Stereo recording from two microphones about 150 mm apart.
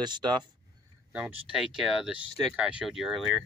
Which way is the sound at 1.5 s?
Centre (ahead or behind).